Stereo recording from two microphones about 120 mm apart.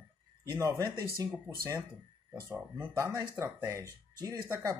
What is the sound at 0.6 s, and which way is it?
Speech, 25° right (ahead or behind).